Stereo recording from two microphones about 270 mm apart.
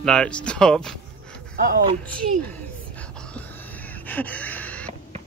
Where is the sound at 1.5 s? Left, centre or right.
Right.